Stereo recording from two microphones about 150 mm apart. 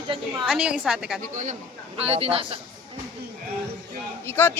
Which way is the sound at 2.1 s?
40° right (ahead or behind).